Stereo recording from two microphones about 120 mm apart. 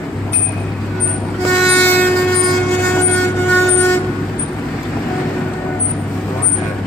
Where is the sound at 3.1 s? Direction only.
15° left (ahead or behind).